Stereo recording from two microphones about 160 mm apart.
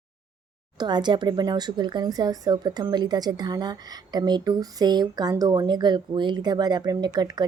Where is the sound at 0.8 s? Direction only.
30° right (ahead or behind).